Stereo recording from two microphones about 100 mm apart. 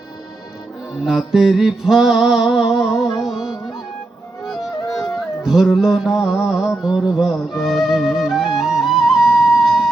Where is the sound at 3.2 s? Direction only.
5° right (ahead or behind).